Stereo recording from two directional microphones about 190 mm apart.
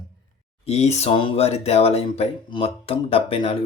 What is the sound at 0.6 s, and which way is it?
Speech, 35° left (ahead or behind).